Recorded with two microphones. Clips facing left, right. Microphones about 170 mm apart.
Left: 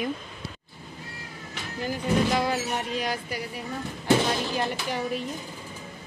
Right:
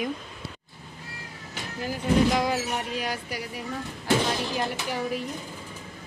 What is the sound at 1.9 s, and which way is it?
Speech, 5° right (ahead or behind).